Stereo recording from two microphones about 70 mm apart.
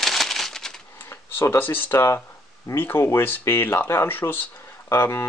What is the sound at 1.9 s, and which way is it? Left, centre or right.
Speech, left.